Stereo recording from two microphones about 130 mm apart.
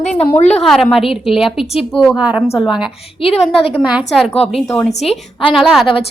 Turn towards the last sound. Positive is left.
turn(degrees=0)  # may be behind; listen again after turning